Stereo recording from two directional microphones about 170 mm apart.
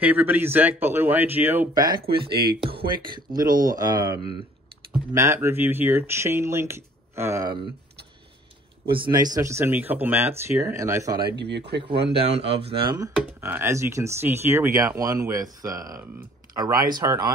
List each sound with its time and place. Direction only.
0.0 s speech: 10° right (ahead or behind)
1.7 s speech: 25° right (ahead or behind)
2.0 s speech: 65° right (ahead or behind)
2.7 s speech: 30° right (ahead or behind)
8.9 s speech: 25° right (ahead or behind)
11.3 s speech: 90° right
12.3 s speech: 35° right (ahead or behind)
13.4 s speech: 15° right (ahead or behind)